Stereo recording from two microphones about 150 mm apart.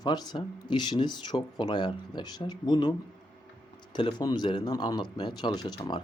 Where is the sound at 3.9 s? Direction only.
30° left (ahead or behind).